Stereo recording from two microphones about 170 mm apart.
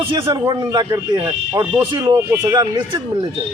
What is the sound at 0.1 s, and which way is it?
Speech, 30° right (ahead or behind).